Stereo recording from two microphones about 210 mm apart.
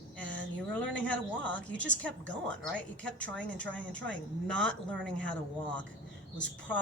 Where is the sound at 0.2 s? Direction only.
60° right (ahead or behind).